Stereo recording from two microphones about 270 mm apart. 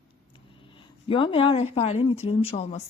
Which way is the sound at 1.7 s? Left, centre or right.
Left.